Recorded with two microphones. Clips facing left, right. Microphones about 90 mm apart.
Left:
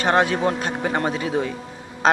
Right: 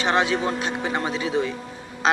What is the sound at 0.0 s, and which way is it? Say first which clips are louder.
Speech: left 3 dB; 50° left (ahead or behind).